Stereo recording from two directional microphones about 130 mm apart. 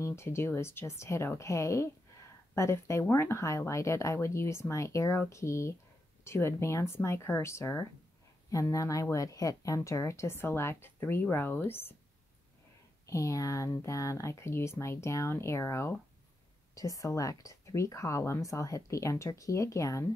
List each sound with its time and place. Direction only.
0.0 s speech: 20° left (ahead or behind)
13.0 s speech: 25° left (ahead or behind)